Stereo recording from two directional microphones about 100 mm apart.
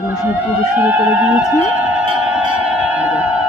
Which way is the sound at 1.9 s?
10° right (ahead or behind).